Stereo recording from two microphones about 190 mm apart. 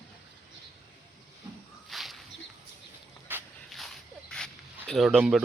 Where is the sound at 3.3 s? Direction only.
10° right (ahead or behind).